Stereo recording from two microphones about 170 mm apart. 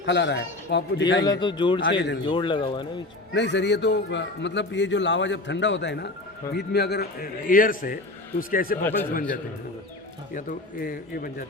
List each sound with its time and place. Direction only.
0.0 s a man's voice: 90° left
1.2 s a man's voice: 25° left (ahead or behind)
1.8 s a man's voice: 90° left
2.2 s a man's voice: 30° left (ahead or behind)
3.3 s a man's voice: 90° left
6.5 s a man's voice: 75° left (ahead or behind); by 8.8 s 55° left (ahead or behind)
8.8 s speech: 10° left (ahead or behind)
10.3 s a man's voice: 55° left (ahead or behind)